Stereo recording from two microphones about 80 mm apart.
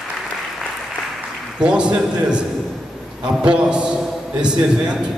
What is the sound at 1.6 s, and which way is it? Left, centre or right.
Speech, centre.